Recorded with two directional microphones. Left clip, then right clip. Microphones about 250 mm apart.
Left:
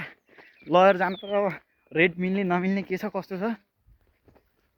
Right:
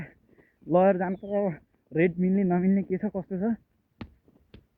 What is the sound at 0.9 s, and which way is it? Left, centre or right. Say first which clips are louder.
Speech: left 3 dB; left.